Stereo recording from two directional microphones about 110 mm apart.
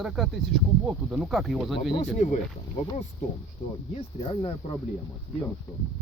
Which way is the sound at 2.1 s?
90° left.